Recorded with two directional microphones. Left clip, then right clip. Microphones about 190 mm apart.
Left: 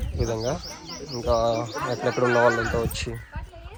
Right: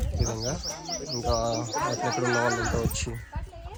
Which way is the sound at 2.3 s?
35° right (ahead or behind).